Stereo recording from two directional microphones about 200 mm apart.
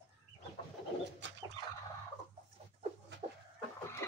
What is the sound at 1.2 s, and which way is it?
Fowl, 65° right (ahead or behind).